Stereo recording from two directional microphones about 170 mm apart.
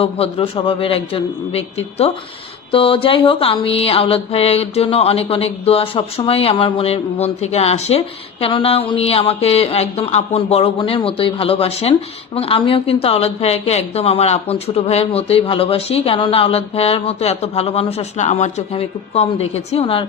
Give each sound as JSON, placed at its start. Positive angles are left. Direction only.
{"t": 0.0, "sound": "mantra", "side_deg": 35}